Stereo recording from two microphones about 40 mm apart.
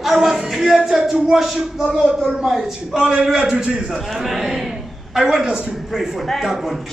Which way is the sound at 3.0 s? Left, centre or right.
Right.